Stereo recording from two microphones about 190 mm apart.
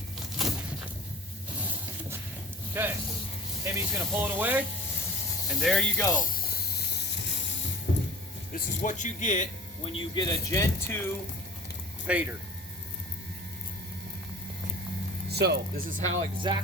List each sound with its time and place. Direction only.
0.4 s a sound: centre (ahead or behind)
2.8 s speech: 10° right (ahead or behind)
5.5 s speech: centre (ahead or behind)
6.1 s a sound: 50° left (ahead or behind)
7.9 s a sound: 75° left (ahead or behind)
8.5 s speech: 45° left (ahead or behind); by 11.0 s 15° left (ahead or behind)
12.0 s speech: 5° right (ahead or behind)
15.3 s speech: 60° right (ahead or behind)
16.4 s music: 25° right (ahead or behind)